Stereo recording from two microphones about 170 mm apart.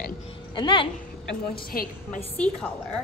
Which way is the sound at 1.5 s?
60° left (ahead or behind).